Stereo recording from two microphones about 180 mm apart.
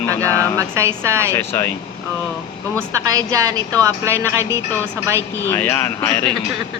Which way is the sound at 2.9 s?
15° right (ahead or behind).